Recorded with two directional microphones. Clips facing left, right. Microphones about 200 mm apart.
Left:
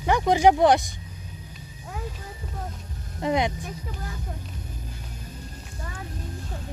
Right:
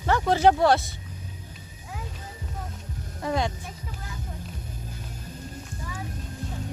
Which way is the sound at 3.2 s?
20° left (ahead or behind).